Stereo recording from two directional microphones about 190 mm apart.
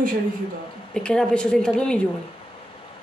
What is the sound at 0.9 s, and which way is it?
A woman's voice, 5° left (ahead or behind).